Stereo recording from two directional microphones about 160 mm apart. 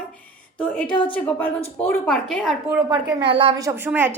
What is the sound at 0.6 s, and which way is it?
A woman's voice, 5° left (ahead or behind).